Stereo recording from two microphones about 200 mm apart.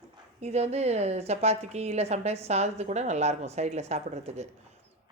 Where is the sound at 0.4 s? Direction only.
35° right (ahead or behind).